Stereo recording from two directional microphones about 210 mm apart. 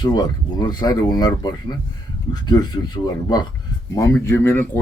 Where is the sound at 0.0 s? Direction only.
20° left (ahead or behind).